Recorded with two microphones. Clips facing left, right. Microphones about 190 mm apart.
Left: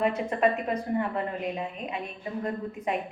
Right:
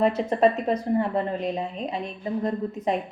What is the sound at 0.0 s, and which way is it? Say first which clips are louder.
A woman's voice: right 4 dB; 35° right (ahead or behind).